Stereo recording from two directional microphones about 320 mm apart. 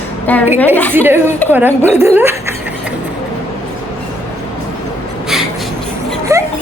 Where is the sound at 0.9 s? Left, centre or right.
Centre.